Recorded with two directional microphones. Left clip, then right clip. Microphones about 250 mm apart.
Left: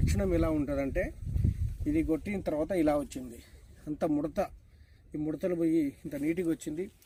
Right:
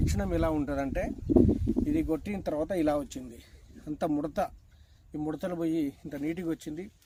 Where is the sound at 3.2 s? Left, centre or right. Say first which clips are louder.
Even; right.